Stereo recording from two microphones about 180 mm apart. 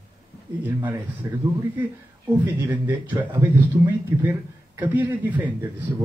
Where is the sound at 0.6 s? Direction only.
10° right (ahead or behind).